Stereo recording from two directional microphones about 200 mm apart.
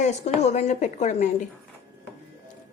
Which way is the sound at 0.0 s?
35° left (ahead or behind).